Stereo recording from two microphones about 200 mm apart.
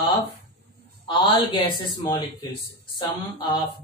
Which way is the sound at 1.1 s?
20° left (ahead or behind).